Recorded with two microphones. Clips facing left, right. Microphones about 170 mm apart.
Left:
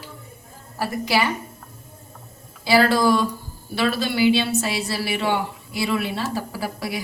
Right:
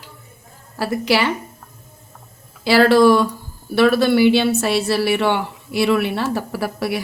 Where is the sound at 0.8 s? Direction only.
80° right.